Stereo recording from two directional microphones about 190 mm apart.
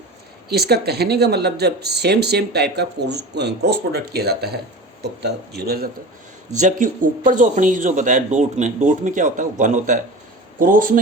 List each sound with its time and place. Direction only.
0.4 s speech: 55° right (ahead or behind)
6.5 s speech: 40° right (ahead or behind)